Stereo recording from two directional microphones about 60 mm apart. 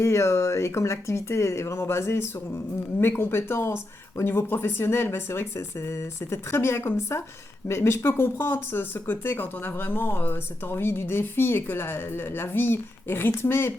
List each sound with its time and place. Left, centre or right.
0.0 s speech: left